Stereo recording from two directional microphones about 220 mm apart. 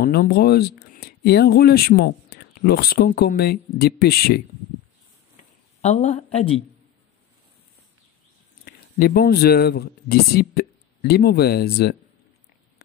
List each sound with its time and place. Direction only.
0.0 s speech: 45° left (ahead or behind)
5.8 s speech: 30° left (ahead or behind)
8.6 s speech: 45° left (ahead or behind)